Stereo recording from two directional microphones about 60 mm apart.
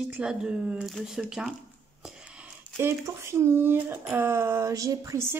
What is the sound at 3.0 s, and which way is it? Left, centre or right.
Speech, right.